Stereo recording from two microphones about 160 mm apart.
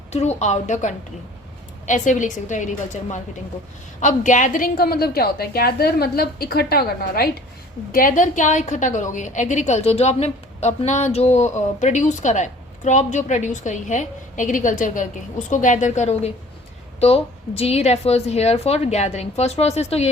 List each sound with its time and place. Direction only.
0.1 s a woman's voice: 45° left (ahead or behind); by 7.3 s 75° left (ahead or behind)
7.9 s a woman's voice: 55° left (ahead or behind)